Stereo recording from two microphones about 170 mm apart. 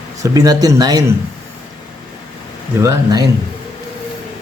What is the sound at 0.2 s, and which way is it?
Speech, 20° right (ahead or behind).